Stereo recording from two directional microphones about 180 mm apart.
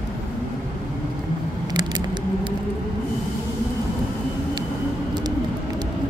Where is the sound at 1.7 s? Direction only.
25° right (ahead or behind).